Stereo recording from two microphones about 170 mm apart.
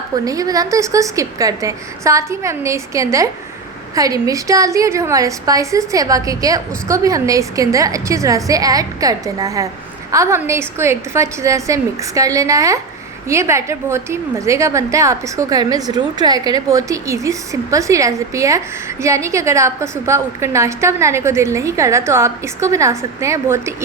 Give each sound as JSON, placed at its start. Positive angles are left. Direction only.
{"t": 0.3, "sound": "a woman's voice", "side_deg": -20}